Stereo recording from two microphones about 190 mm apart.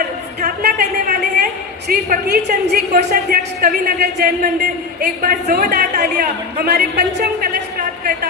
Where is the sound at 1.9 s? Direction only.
55° right (ahead or behind).